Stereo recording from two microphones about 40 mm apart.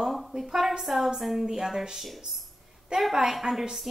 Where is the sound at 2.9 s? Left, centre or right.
Right.